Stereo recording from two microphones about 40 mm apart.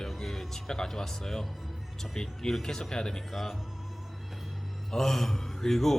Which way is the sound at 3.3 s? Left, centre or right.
Centre.